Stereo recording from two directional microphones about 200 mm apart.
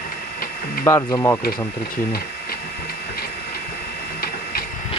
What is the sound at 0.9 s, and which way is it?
Speech, 15° left (ahead or behind).